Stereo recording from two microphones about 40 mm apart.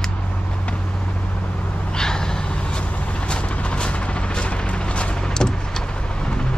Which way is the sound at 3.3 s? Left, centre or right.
Left.